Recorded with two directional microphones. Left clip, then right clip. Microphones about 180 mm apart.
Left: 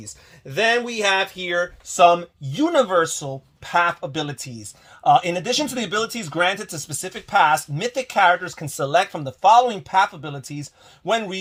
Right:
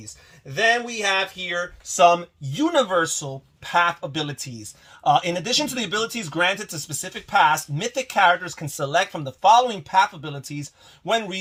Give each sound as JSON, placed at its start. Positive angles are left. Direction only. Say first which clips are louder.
{"t": 0.0, "sound": "speech", "louder": "left 3 dB", "side_deg": 60}